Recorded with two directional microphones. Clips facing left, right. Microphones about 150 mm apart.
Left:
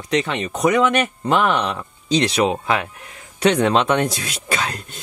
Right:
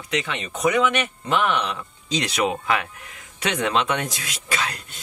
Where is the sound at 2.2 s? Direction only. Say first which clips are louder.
Left 2 dB; 30° left (ahead or behind).